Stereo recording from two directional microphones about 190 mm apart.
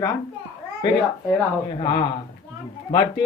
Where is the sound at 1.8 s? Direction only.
25° left (ahead or behind).